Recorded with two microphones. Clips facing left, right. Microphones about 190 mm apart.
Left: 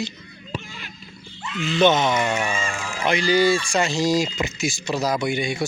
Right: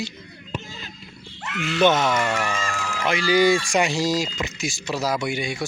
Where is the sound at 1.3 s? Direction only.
70° right (ahead or behind).